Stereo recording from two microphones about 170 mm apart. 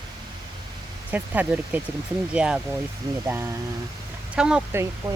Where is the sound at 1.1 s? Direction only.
10° right (ahead or behind).